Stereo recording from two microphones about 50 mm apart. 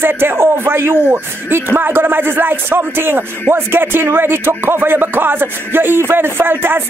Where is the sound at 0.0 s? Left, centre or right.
Right.